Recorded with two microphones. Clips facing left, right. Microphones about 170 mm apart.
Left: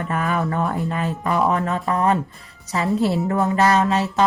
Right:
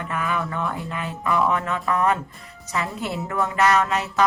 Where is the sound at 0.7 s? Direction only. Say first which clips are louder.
Left 6 dB; 40° left (ahead or behind).